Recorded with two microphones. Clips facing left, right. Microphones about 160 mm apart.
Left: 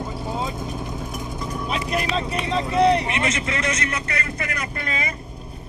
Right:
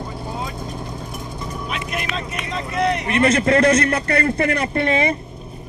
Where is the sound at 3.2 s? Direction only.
55° right (ahead or behind).